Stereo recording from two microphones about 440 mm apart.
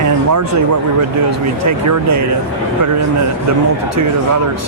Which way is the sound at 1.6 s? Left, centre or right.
Right.